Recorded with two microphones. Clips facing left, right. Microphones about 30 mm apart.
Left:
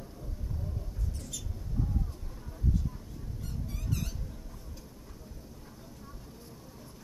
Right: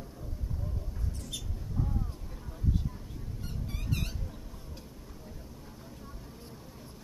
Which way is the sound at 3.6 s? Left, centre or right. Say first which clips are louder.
Right 1 dB; right.